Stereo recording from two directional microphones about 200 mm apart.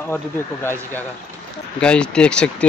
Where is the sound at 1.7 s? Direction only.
5° left (ahead or behind).